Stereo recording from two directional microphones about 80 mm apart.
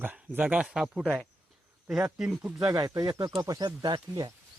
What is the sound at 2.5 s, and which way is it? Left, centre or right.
Speech, right.